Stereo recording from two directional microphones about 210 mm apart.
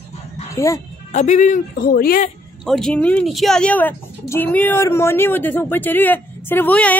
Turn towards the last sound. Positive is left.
turn(degrees=5)  # may be behind; listen again after turning